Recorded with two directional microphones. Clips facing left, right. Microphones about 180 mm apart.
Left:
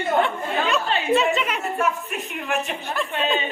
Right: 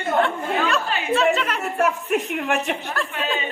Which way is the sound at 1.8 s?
75° right (ahead or behind).